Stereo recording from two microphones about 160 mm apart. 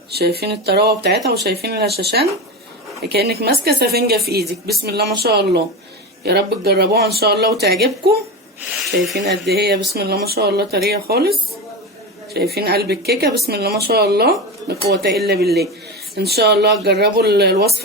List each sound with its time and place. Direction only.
0.1 s speech: 80° right
8.8 s speech: centre (ahead or behind)
9.1 s speech: 90° right
13.5 s speech: 75° right (ahead or behind)